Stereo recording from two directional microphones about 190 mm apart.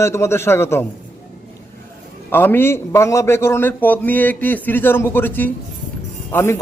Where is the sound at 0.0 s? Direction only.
15° left (ahead or behind).